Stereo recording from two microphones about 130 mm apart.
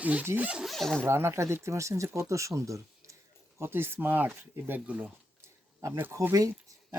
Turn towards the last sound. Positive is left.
turn(degrees=-25)  # may be behind; listen again after turning